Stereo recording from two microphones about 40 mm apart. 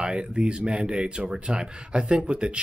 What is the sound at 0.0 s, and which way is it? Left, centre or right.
Speech, right.